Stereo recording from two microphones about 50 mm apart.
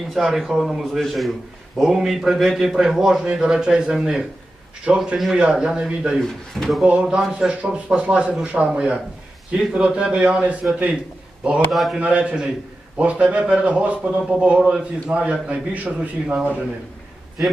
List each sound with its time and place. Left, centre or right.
0.1 s a man's voice: centre
5.4 s a man's voice: right
6.5 s speech: centre
6.8 s speech: right
11.7 s speech: centre
11.9 s speech: right